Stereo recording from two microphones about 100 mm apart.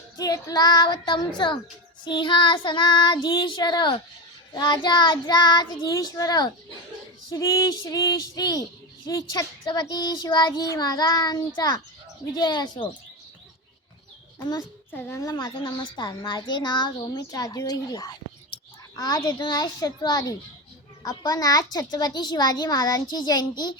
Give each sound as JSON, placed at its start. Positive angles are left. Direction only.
{"t": 0.2, "sound": "child singing", "side_deg": 35}
{"t": 5.9, "sound": "speech", "side_deg": 35}
{"t": 12.4, "sound": "child singing", "side_deg": 45}
{"t": 15.1, "sound": "speech", "side_deg": 40}